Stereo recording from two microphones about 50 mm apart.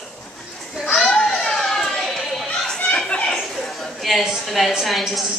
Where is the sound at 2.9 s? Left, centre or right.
Left.